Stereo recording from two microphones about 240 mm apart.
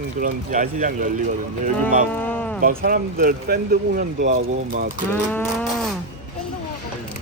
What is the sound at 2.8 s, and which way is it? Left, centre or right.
Speech, right.